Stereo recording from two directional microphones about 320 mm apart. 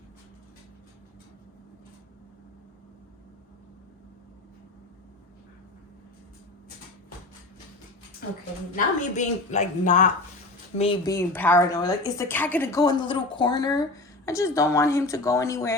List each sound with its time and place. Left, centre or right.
8.7 s a woman's voice: left